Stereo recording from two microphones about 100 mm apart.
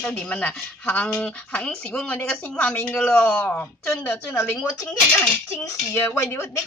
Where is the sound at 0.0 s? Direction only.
10° left (ahead or behind).